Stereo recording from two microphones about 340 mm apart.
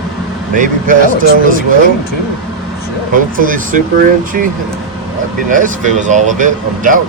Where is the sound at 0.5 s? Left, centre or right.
Right.